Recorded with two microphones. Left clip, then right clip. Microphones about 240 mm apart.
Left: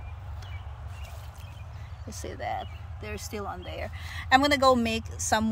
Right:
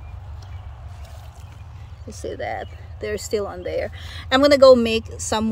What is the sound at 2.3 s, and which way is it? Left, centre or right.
Speech, left.